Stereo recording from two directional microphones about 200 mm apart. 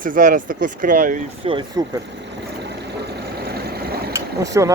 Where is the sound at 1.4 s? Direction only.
30° right (ahead or behind).